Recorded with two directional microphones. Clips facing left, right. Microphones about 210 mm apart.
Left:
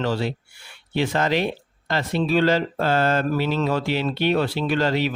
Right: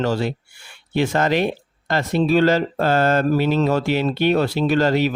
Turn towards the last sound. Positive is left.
turn(degrees=-45)  # may be behind; listen again after turning